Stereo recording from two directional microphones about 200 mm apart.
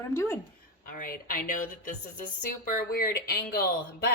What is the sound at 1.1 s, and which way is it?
Speech, 45° left (ahead or behind).